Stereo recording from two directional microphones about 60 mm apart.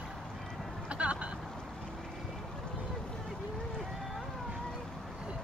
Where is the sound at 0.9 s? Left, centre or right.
Right.